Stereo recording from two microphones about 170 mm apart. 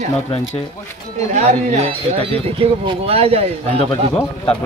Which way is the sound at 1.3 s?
40° right (ahead or behind).